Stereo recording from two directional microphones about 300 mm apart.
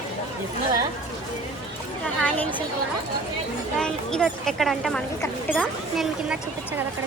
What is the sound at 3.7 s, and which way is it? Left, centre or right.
Speech, centre.